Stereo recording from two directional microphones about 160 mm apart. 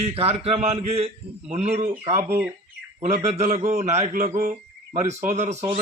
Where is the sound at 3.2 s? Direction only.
45° right (ahead or behind).